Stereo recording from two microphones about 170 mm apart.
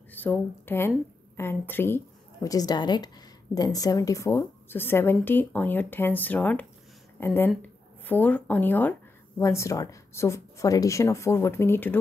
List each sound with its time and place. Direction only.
0.1 s a woman's voice: 10° left (ahead or behind)